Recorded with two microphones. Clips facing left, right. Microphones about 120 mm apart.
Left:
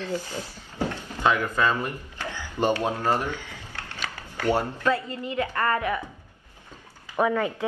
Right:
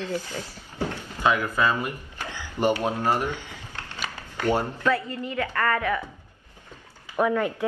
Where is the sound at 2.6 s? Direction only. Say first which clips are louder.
Right 1 dB; 15° right (ahead or behind).